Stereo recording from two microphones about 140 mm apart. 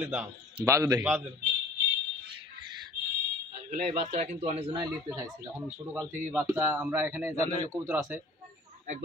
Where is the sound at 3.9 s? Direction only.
60° right (ahead or behind).